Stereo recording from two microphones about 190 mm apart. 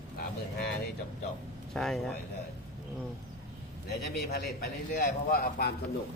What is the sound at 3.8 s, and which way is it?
Speech, 55° left (ahead or behind).